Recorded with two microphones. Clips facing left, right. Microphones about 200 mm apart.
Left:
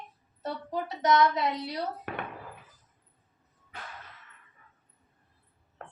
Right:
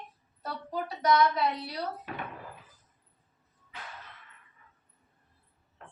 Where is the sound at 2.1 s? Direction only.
65° left (ahead or behind).